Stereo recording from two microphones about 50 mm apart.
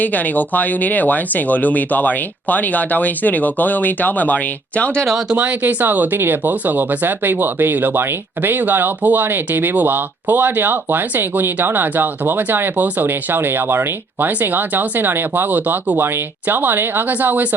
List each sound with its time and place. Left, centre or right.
0.0 s speech: left
5.4 s speech: right